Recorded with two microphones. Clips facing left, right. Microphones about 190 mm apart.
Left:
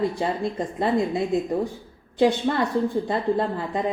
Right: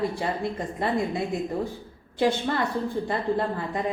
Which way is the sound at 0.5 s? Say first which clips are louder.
Left 4 dB; 20° left (ahead or behind).